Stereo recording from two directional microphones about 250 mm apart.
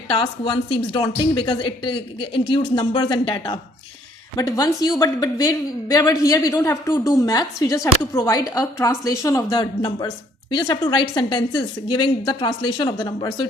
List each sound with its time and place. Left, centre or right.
0.1 s a woman's voice: centre